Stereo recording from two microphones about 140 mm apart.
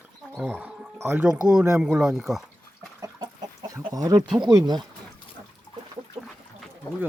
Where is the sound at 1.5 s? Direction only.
5° right (ahead or behind).